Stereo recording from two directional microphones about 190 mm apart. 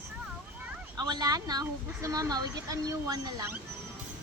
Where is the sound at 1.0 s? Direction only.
20° right (ahead or behind).